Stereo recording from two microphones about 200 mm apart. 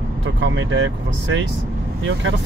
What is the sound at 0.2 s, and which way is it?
Speech, 65° right (ahead or behind).